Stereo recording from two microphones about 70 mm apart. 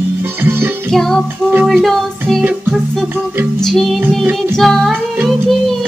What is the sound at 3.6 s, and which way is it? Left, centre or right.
Music, centre.